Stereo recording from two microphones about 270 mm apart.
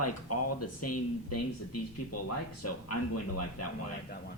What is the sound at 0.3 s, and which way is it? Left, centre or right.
Speech, left.